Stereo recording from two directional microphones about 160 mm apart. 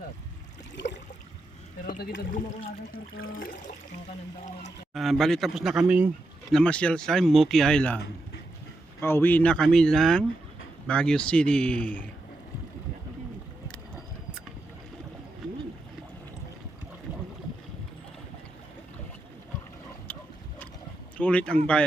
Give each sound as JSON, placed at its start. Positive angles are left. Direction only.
{"t": 1.8, "sound": "speech", "side_deg": 65}
{"t": 3.2, "sound": "toilet flush", "side_deg": 60}
{"t": 4.9, "sound": "speech", "side_deg": 0}
{"t": 6.5, "sound": "speech", "side_deg": 5}
{"t": 9.0, "sound": "speech", "side_deg": 15}
{"t": 21.2, "sound": "speech", "side_deg": 10}